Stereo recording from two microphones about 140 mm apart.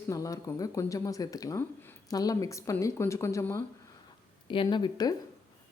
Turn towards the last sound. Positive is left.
turn(degrees=30)  # may be behind; listen again after turning